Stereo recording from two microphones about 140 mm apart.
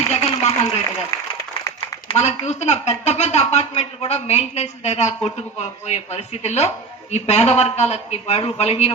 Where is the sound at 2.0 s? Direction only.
50° left (ahead or behind).